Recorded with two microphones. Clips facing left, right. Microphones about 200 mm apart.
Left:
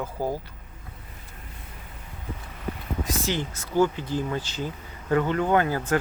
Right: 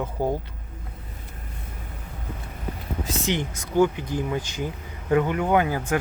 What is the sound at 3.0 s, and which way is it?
Speech, 20° right (ahead or behind).